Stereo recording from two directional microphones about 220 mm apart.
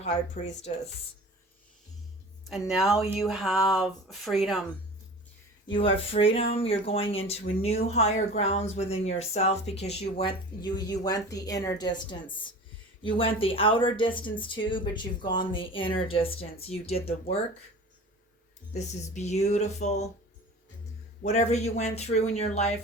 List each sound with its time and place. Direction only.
0.0 s speech: 30° left (ahead or behind)
2.4 s speech: centre (ahead or behind)
6.1 s speech: 25° left (ahead or behind)
10.2 s a woman's voice: 20° left (ahead or behind)
18.7 s speech: 30° left (ahead or behind)
21.2 s speech: 30° left (ahead or behind)